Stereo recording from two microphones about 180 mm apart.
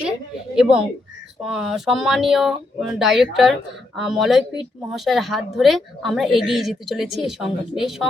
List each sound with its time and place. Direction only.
0.5 s a woman's voice: 5° right (ahead or behind)